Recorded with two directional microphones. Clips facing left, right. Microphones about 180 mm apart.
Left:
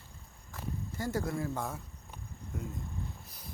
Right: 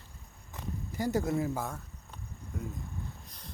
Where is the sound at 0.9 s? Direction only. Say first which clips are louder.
Right 5 dB; 20° right (ahead or behind).